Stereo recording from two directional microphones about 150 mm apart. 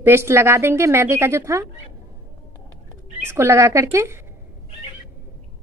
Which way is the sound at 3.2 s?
15° right (ahead or behind).